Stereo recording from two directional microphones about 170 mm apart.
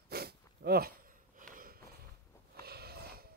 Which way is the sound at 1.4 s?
55° right (ahead or behind).